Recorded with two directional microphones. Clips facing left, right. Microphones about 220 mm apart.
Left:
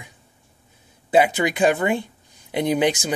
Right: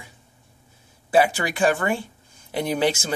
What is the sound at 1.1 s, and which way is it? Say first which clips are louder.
Speech: left 2 dB; 20° left (ahead or behind).